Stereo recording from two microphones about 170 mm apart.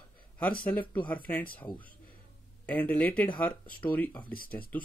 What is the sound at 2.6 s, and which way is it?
Speech, 10° left (ahead or behind).